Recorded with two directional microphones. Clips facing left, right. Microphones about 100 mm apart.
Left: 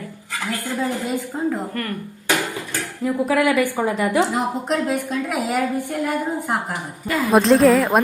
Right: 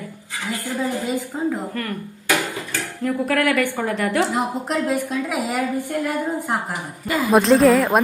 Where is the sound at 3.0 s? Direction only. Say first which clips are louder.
Left 2 dB; 10° left (ahead or behind).